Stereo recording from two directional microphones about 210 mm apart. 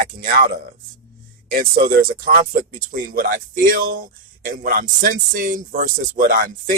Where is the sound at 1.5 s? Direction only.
45° right (ahead or behind).